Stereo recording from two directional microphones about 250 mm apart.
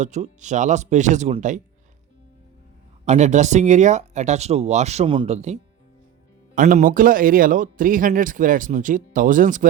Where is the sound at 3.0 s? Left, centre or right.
Right.